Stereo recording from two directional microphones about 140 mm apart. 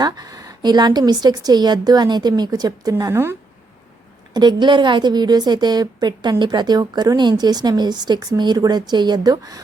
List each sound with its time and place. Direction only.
0.0 s a woman's voice: 25° right (ahead or behind)
4.4 s a woman's voice: 30° right (ahead or behind)